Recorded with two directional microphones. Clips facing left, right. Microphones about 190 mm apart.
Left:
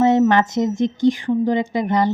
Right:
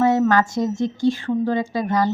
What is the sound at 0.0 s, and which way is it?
Speech, 20° left (ahead or behind).